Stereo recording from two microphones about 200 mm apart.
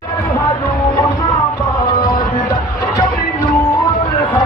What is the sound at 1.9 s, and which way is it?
Music, 20° left (ahead or behind).